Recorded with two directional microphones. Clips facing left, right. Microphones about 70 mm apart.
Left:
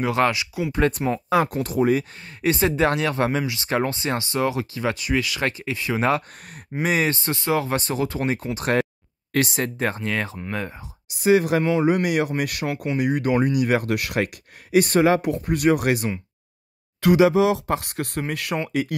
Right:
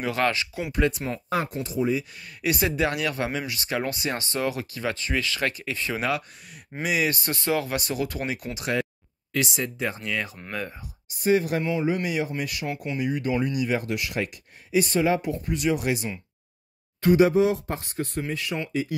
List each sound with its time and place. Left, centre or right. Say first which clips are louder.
0.0 s speech: left 4 dB; left
0.8 s speech: left 3 dB; left
1.5 s speech: left 5 dB; left
2.1 s speech: left 4 dB; left
5.9 s speech: left 8 dB; left
8.5 s speech: left 5 dB; left
10.0 s speech: left 4 dB; left
11.1 s speech: left 4 dB; left
11.7 s speech: left 6 dB; left
17.0 s speech: left 2 dB; left